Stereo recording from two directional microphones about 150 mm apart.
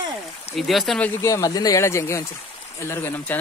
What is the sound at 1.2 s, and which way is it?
Speech, 20° left (ahead or behind).